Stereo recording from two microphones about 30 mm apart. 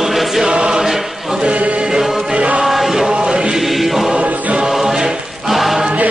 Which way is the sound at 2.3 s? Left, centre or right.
Right.